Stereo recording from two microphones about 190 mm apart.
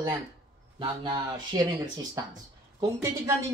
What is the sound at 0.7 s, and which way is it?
Speech, 25° right (ahead or behind).